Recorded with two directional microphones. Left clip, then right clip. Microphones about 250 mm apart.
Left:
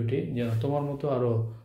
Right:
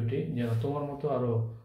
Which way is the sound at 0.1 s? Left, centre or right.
Left.